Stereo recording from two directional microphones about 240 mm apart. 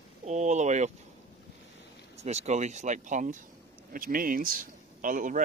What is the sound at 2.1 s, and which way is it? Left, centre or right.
Speech, right.